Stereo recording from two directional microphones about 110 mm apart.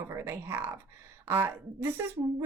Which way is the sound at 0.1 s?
25° right (ahead or behind).